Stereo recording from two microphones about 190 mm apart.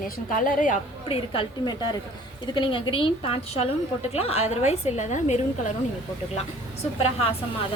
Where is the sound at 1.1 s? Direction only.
25° left (ahead or behind).